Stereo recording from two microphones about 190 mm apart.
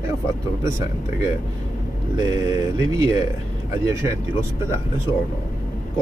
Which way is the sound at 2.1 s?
20° right (ahead or behind).